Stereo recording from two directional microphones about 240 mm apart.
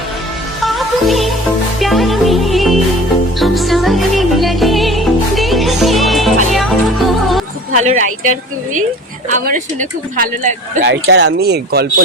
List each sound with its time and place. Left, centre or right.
0.6 s music: centre
7.8 s speech: right
9.3 s speech: right